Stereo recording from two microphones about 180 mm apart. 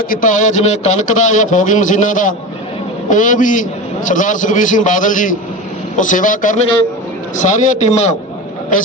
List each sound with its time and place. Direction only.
0.1 s a man's voice: 45° left (ahead or behind)